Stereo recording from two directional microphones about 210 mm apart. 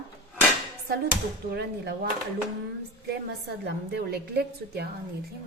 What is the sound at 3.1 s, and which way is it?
A woman's voice, 50° right (ahead or behind).